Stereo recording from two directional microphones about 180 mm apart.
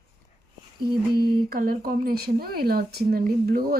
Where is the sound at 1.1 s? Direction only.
55° right (ahead or behind).